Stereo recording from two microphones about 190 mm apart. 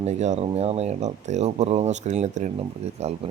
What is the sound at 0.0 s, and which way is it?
Speech, 35° right (ahead or behind).